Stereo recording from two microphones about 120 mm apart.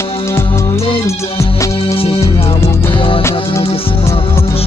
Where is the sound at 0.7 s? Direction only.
50° left (ahead or behind).